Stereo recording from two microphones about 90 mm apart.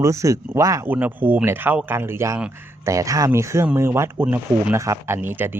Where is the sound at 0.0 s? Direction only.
35° right (ahead or behind).